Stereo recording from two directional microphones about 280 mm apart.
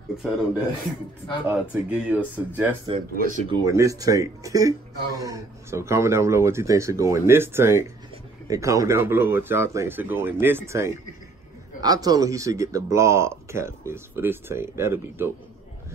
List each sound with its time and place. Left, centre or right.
1.5 s speech: centre
2.9 s speech: right
3.4 s speech: centre